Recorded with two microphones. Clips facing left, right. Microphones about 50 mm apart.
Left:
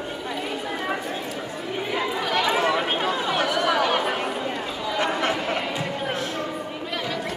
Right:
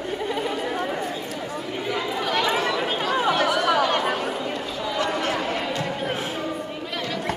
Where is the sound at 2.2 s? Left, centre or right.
Centre.